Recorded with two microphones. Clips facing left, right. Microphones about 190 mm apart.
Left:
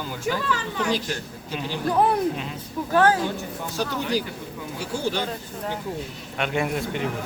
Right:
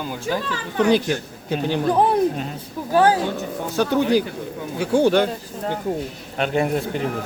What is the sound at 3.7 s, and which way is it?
Speech, 60° right (ahead or behind).